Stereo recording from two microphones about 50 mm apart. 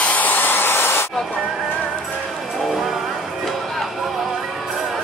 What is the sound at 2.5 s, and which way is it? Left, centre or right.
Music, centre.